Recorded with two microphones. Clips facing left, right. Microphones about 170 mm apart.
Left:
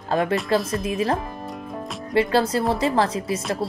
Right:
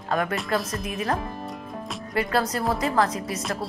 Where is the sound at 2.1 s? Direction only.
25° left (ahead or behind).